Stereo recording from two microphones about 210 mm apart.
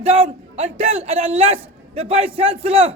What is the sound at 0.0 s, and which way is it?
A man's voice, 30° right (ahead or behind).